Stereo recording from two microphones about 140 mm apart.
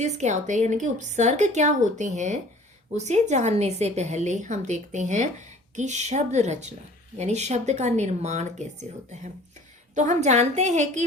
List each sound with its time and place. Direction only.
0.0 s a woman's voice: 55° right (ahead or behind)